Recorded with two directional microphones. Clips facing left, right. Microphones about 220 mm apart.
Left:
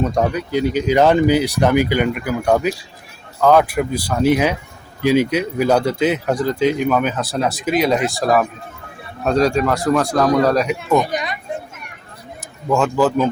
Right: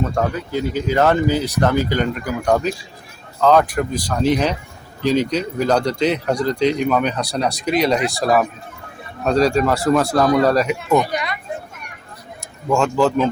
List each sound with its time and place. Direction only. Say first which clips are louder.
0.0 s speech: left 2 dB; 15° left (ahead or behind); by 10.9 s centre (ahead or behind)
10.9 s speech: even; 20° left (ahead or behind)
12.6 s speech: even; centre (ahead or behind)